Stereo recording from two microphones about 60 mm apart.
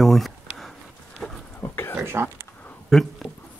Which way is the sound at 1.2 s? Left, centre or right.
Centre.